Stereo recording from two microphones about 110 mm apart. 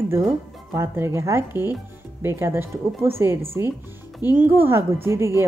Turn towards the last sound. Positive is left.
turn(degrees=-25)  # may be behind; listen again after turning